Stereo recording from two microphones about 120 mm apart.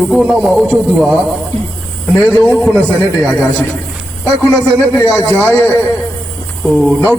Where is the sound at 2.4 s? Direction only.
10° left (ahead or behind).